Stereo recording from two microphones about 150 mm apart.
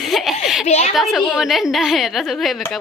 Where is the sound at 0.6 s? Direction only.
45° left (ahead or behind).